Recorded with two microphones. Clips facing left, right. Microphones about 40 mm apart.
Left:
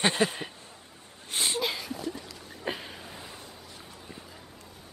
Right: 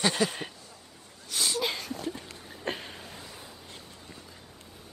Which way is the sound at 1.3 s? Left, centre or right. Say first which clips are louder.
Left 1 dB; left.